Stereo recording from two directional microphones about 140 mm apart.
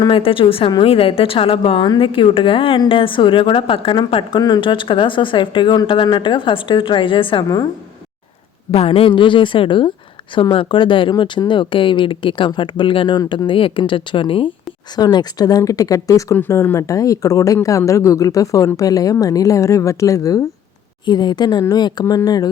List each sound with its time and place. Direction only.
0.0 s a woman's voice: 40° left (ahead or behind)
7.4 s speech: 25° left (ahead or behind)
8.7 s a woman's voice: 45° left (ahead or behind); by 22.4 s 25° left (ahead or behind)